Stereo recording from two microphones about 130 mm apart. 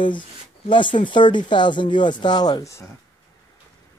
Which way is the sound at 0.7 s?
40° left (ahead or behind).